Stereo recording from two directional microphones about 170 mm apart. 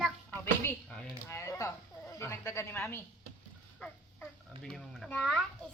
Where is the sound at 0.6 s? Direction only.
10° left (ahead or behind).